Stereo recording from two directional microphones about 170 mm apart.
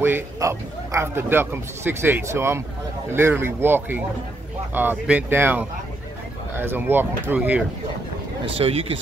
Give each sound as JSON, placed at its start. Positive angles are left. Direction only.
{"t": 0.0, "sound": "a man's voice", "side_deg": -15}
{"t": 8.5, "sound": "speech", "side_deg": -35}